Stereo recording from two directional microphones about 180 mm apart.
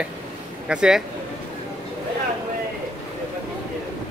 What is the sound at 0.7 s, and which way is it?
Speech, 5° right (ahead or behind).